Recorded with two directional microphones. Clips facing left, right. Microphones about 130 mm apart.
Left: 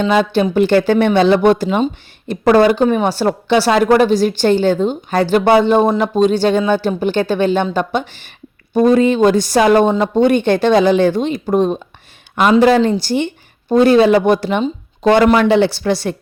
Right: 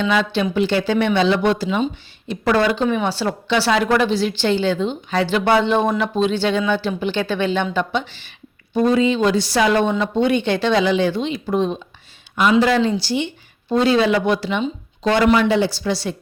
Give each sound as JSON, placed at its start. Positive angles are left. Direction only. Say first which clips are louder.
{"t": 0.0, "sound": "speech", "louder": "left 5 dB", "side_deg": 45}